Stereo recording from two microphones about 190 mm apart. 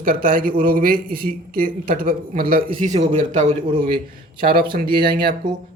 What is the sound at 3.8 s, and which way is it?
A man's voice, 50° right (ahead or behind).